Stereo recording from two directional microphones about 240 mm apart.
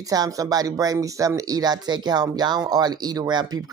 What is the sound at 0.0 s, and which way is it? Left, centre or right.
Speech, centre.